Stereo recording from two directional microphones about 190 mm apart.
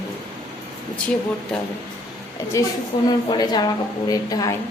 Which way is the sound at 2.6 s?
15° left (ahead or behind).